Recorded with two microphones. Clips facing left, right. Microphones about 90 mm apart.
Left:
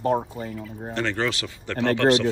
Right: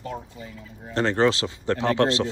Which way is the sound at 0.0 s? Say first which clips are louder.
Left 11 dB; 55° left (ahead or behind).